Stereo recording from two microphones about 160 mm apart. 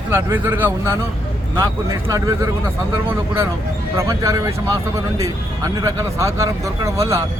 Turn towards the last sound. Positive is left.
turn(degrees=-20)  # may be behind; listen again after turning